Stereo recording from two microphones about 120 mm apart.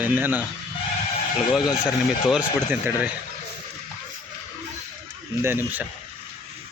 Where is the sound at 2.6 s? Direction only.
15° right (ahead or behind).